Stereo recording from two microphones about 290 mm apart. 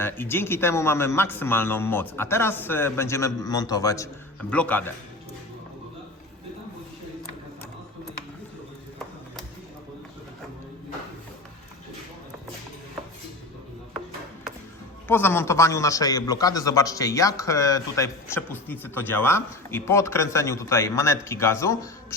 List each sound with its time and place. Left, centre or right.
0.0 s a man's voice: centre
15.0 s a man's voice: centre